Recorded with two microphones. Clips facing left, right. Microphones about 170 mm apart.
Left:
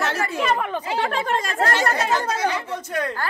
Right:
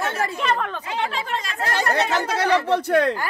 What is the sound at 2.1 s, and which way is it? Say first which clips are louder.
Speech: right 2 dB; 70° right (ahead or behind).